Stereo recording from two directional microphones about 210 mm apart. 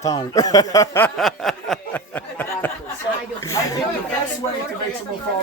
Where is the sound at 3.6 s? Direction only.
15° left (ahead or behind).